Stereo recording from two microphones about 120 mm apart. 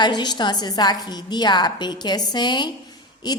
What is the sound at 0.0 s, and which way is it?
A woman's voice, 35° left (ahead or behind).